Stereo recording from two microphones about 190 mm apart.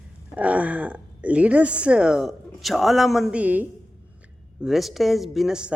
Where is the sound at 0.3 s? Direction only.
5° right (ahead or behind).